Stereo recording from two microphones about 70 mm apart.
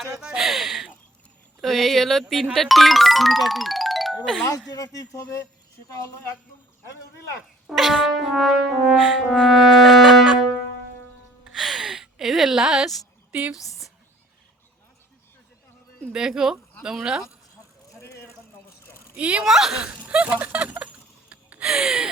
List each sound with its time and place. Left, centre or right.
0.0 s speech: centre
1.6 s brass instrument: centre
2.3 s speech: centre
4.7 s speech: left
7.7 s brass instrument: centre
11.4 s music: centre
16.1 s speech: centre
18.0 s a sound: left
19.1 s speech: centre
19.5 s brass instrument: centre
19.8 s a sound: centre